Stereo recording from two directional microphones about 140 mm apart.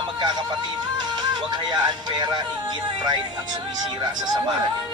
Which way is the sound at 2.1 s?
30° right (ahead or behind).